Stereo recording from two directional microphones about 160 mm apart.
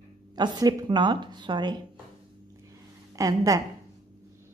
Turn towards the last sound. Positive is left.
turn(degrees=-20)  # may be behind; listen again after turning